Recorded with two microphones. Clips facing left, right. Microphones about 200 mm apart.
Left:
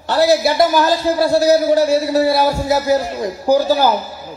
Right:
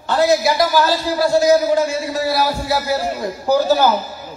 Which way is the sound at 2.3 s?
25° left (ahead or behind).